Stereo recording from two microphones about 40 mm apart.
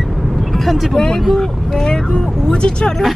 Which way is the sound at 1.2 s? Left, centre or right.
Centre.